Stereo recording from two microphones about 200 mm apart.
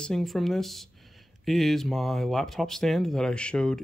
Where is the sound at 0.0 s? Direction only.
Centre (ahead or behind).